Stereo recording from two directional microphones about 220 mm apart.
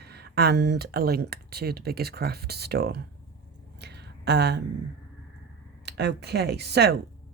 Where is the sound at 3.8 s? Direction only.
50° right (ahead or behind).